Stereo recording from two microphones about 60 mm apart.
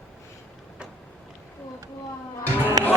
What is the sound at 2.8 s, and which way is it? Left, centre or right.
Music, right.